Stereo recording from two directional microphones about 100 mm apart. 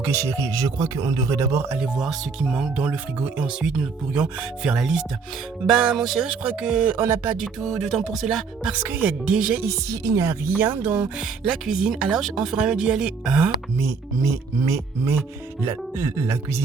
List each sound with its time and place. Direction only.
0.0 s speech: 30° right (ahead or behind)
1.6 s speech: 20° right (ahead or behind)
2.0 s speech: 5° right (ahead or behind)
6.9 s speech: 20° right (ahead or behind)
7.3 s speech: 5° right (ahead or behind)
8.7 s speech: 15° right (ahead or behind)
9.6 s speech: 30° right (ahead or behind)
10.4 s speech: 20° right (ahead or behind)
13.7 s speech: 35° right (ahead or behind)